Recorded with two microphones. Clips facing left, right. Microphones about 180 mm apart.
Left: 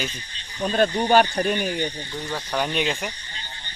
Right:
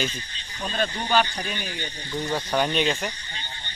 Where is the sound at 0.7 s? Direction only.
50° left (ahead or behind).